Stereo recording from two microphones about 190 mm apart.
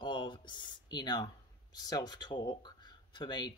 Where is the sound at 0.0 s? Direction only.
25° left (ahead or behind).